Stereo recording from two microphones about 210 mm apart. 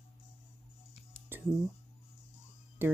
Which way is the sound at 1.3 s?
10° right (ahead or behind).